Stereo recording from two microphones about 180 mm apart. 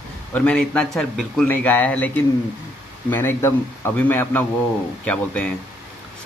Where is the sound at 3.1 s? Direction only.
10° left (ahead or behind).